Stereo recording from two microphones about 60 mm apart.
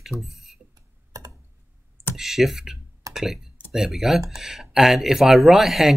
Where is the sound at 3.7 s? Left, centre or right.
Centre.